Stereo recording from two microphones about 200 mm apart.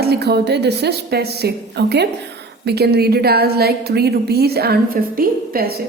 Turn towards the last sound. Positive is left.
turn(degrees=-50)  # may be behind; listen again after turning